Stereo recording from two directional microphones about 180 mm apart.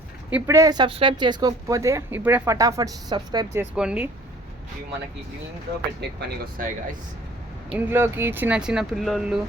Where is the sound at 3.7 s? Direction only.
5° right (ahead or behind).